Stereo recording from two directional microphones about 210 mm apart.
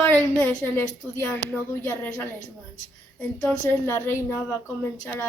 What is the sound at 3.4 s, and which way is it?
Speech, 10° left (ahead or behind).